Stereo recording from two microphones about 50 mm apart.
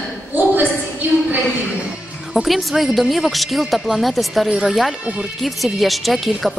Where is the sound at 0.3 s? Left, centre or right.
Right.